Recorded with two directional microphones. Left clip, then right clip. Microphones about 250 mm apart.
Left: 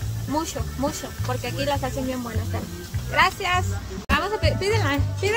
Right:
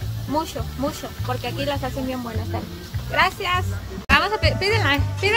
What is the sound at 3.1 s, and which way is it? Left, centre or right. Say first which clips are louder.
Speech: even; centre.